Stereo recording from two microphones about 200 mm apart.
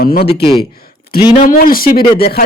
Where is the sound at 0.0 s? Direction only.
50° left (ahead or behind).